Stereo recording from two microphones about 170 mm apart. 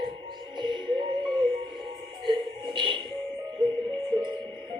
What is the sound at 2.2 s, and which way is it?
Music, 30° right (ahead or behind).